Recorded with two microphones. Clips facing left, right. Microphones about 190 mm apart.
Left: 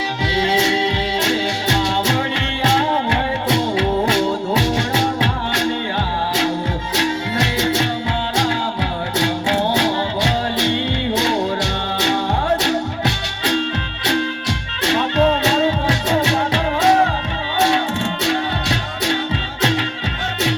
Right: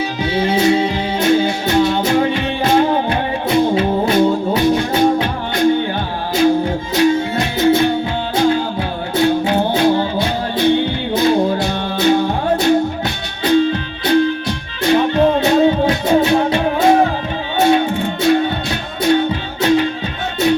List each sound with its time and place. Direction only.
0.3 s music: 85° left
6.9 s music: 80° left